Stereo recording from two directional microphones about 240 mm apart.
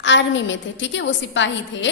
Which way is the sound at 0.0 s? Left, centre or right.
Left.